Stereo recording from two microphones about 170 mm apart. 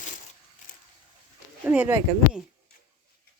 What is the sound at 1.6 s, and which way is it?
Speech, 10° right (ahead or behind).